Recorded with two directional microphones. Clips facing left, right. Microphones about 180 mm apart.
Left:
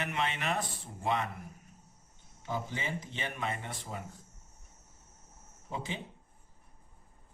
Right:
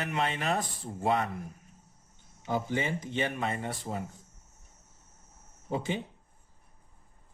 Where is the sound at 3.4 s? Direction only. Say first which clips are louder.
Right 4 dB; 40° right (ahead or behind).